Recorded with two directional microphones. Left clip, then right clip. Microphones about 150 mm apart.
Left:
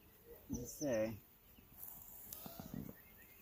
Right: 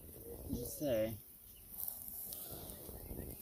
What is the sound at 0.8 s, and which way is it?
Speech, 25° right (ahead or behind).